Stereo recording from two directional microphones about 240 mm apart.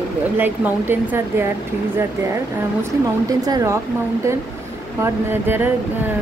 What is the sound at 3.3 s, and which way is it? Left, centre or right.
Speech, centre.